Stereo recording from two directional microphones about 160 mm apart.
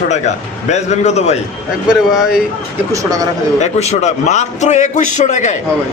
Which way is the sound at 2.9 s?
20° right (ahead or behind).